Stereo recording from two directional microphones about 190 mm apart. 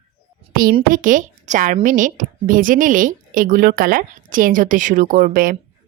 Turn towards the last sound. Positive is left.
turn(degrees=-45)  # may be behind; listen again after turning